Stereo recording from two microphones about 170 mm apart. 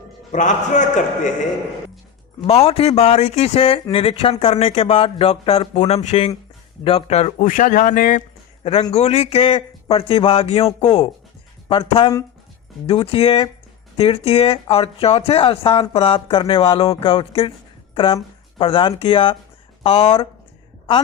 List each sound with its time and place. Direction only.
0.3 s speech: 45° left (ahead or behind)
2.4 s speech: 35° left (ahead or behind); by 8.2 s 50° left (ahead or behind)
8.9 s speech: 40° left (ahead or behind)